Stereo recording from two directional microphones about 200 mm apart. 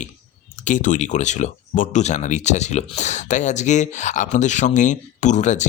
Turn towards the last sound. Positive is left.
turn(degrees=35)  # may be behind; listen again after turning